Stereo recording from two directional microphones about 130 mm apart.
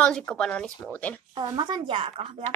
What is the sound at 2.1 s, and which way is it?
Speech, 50° right (ahead or behind).